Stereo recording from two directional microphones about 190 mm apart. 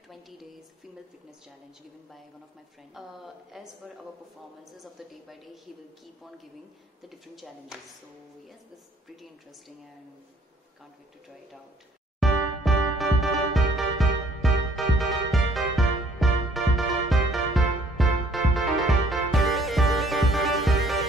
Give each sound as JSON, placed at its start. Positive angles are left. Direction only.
{"t": 0.1, "sound": "a woman's voice", "side_deg": 0}
{"t": 2.9, "sound": "a woman's voice", "side_deg": 0}
{"t": 4.7, "sound": "a woman's voice", "side_deg": 0}
{"t": 7.0, "sound": "a woman's voice", "side_deg": 0}
{"t": 12.2, "sound": "music", "side_deg": 0}